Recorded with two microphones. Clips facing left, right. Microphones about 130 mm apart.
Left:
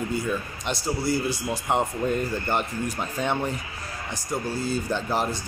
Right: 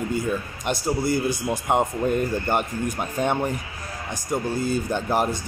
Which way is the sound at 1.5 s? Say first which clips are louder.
Right 3 dB; 10° right (ahead or behind).